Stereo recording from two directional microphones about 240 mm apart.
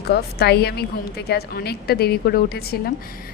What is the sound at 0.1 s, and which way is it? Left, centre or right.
A woman's voice, left.